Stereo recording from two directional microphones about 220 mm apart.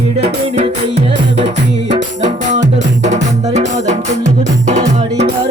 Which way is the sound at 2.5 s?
35° right (ahead or behind).